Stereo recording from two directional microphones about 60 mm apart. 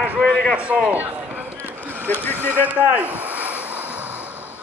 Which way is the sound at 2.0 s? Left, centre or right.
Left.